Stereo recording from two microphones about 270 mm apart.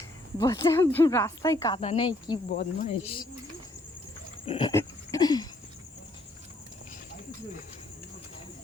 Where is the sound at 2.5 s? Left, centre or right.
Left.